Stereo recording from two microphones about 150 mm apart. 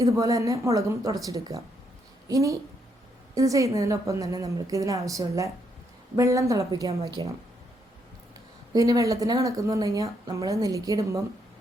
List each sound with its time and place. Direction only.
0.0 s a woman's voice: 20° right (ahead or behind)
8.7 s speech: 25° right (ahead or behind)